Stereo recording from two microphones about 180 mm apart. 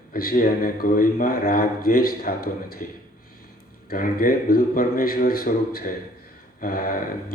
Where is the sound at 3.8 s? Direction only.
50° left (ahead or behind).